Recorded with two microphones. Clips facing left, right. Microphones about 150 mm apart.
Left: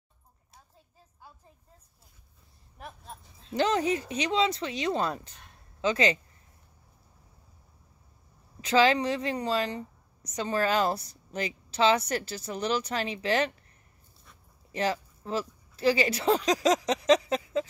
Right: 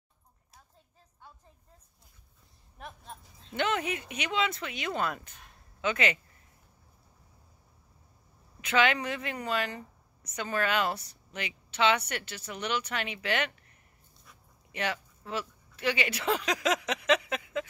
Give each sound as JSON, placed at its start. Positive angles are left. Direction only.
{"t": 2.8, "sound": "speech", "side_deg": 0}
{"t": 3.5, "sound": "speech", "side_deg": 35}
{"t": 8.5, "sound": "speech", "side_deg": 30}
{"t": 14.7, "sound": "speech", "side_deg": 35}